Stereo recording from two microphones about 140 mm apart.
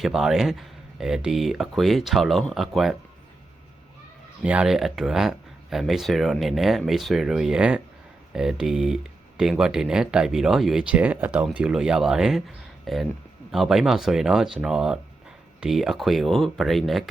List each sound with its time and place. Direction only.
0.0 s speech: centre (ahead or behind)
4.4 s speech: 5° right (ahead or behind)